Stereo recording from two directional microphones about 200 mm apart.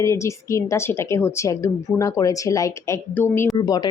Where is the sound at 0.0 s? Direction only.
15° left (ahead or behind).